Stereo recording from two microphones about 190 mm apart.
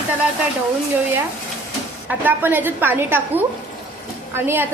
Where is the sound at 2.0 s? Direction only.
10° right (ahead or behind).